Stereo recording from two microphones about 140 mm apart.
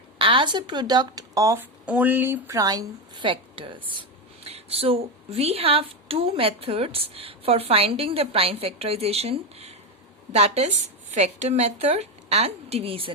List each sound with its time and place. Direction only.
0.2 s a woman's voice: 35° right (ahead or behind)
1.8 s a woman's voice: 10° right (ahead or behind); by 13.1 s 40° right (ahead or behind)